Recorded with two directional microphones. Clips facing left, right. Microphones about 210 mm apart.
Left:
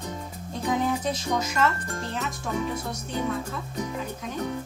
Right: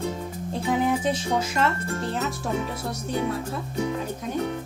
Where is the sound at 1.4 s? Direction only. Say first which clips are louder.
Right 1 dB; 30° right (ahead or behind).